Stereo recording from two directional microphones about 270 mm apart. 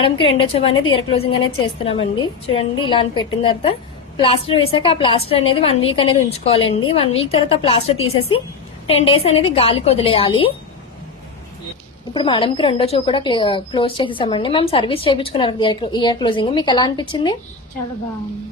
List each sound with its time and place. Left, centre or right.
0.0 s a woman's voice: centre
12.1 s a woman's voice: centre